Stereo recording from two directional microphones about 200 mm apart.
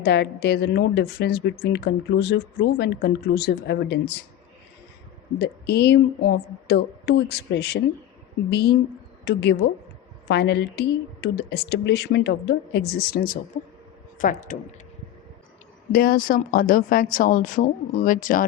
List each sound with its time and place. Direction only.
0.0 s speech: 55° left (ahead or behind)
5.4 s speech: 55° left (ahead or behind); by 14.6 s 40° left (ahead or behind)
15.9 s speech: 50° left (ahead or behind)